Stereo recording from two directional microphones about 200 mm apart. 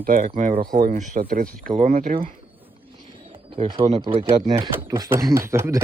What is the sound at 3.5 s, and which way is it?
Speech, 25° right (ahead or behind).